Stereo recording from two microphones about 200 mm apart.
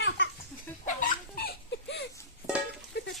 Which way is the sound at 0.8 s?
45° left (ahead or behind).